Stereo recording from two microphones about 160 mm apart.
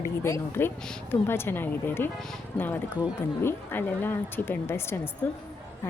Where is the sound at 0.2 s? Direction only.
15° left (ahead or behind).